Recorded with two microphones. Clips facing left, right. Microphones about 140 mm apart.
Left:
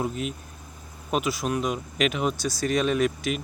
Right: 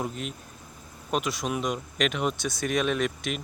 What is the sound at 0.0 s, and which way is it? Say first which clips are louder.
Speech: left 4 dB; 5° left (ahead or behind).